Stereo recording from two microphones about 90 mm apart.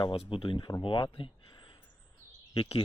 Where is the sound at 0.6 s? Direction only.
45° left (ahead or behind).